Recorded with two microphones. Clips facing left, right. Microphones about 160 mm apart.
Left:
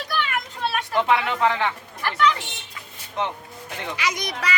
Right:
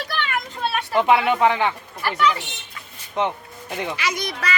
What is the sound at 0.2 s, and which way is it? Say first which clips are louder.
Children playing: right 1 dB; centre (ahead or behind).